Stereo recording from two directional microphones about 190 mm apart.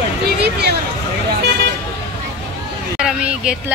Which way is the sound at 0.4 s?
60° right (ahead or behind).